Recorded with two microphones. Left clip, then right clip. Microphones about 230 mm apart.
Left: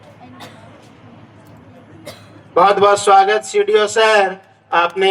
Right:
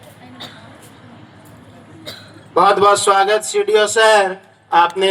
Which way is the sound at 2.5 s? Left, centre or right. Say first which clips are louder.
Even; right.